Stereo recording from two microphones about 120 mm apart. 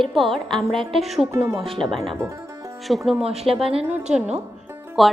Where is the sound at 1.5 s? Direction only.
50° right (ahead or behind).